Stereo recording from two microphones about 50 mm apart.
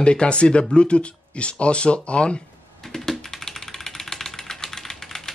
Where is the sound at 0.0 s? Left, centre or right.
Left.